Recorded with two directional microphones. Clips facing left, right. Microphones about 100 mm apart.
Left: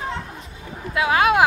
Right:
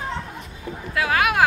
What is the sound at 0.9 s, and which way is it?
Speech, 25° left (ahead or behind).